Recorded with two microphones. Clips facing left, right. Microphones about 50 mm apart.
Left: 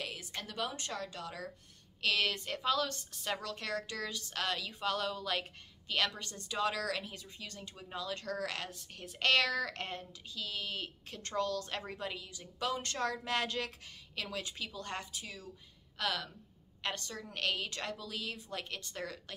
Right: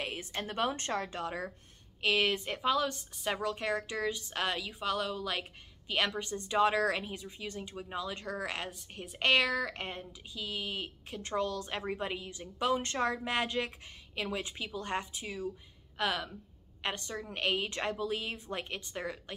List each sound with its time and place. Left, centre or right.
0.0 s a woman's voice: right
2.0 s a woman's voice: right
5.9 s a woman's voice: right